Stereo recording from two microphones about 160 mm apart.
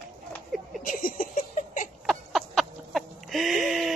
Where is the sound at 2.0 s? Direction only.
Centre (ahead or behind).